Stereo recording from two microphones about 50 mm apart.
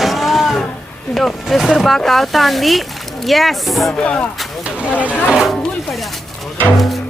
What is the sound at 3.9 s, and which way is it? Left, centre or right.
Speech, left.